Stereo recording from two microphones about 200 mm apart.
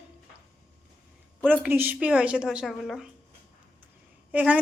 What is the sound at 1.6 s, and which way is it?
A woman's voice, 10° right (ahead or behind).